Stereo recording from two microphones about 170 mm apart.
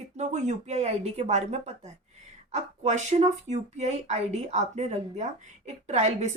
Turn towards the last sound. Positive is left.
turn(degrees=-40)  # may be behind; listen again after turning